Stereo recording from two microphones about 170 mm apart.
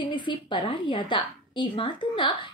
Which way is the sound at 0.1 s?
30° left (ahead or behind).